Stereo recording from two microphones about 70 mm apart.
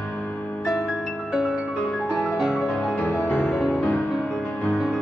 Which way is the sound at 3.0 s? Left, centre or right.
Left.